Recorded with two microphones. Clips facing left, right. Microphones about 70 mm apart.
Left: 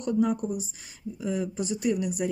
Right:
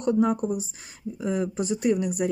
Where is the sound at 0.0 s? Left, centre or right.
Right.